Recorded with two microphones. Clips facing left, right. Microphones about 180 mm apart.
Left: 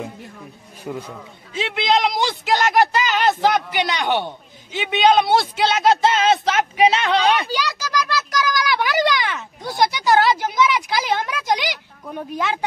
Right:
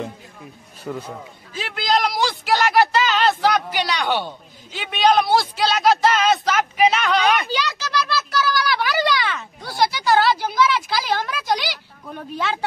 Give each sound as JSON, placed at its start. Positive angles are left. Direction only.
{"t": 0.9, "sound": "speech", "side_deg": 10}
{"t": 1.5, "sound": "a woman's voice", "side_deg": 25}
{"t": 7.4, "sound": "a sound", "side_deg": 10}
{"t": 12.1, "sound": "speech", "side_deg": 10}